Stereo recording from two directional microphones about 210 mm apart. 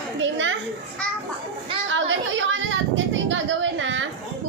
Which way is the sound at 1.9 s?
65° right (ahead or behind).